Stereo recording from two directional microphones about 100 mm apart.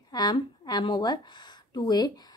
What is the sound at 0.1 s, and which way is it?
A woman's voice, 40° left (ahead or behind).